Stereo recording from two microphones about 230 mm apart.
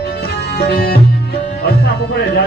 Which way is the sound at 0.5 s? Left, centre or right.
Left.